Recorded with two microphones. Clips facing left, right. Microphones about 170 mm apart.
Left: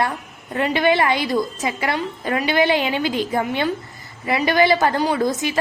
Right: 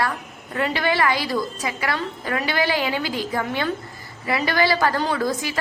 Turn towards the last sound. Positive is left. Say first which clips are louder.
# left 4 dB
turn(degrees=20)  # may be behind; listen again after turning